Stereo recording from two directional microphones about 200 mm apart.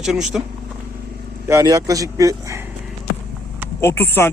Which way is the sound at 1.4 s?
15° right (ahead or behind).